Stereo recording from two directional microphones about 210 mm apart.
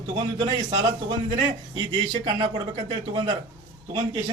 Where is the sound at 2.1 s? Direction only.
25° right (ahead or behind).